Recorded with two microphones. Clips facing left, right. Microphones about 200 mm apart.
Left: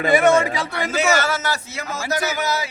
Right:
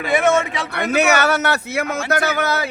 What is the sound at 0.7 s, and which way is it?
A man's voice, 60° right (ahead or behind).